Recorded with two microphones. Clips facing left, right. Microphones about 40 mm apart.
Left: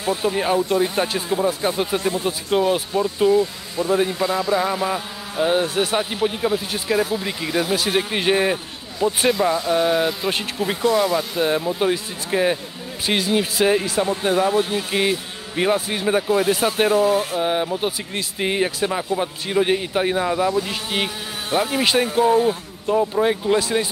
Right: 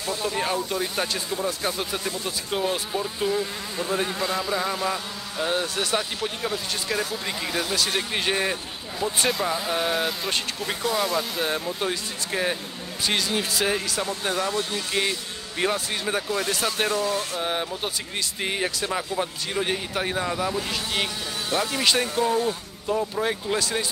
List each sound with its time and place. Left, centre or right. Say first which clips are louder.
0.0 s speech: left 6 dB; centre
3.0 s speech: left 11 dB; centre
9.3 s speech: left 7 dB; centre